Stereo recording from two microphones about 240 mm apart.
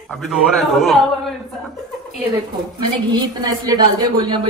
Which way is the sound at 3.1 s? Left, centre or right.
Centre.